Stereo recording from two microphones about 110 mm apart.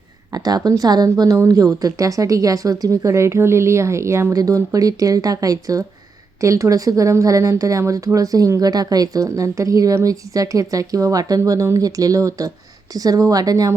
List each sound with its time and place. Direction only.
0.3 s speech: 35° right (ahead or behind)